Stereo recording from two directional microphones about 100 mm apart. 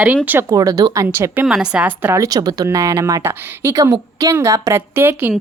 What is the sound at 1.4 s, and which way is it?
Speech, 5° right (ahead or behind).